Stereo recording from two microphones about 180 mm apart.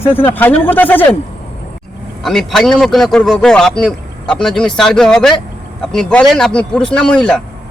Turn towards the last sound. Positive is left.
turn(degrees=5)  # may be behind; listen again after turning